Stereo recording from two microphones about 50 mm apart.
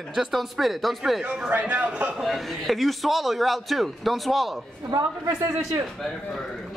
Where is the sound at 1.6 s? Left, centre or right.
Right.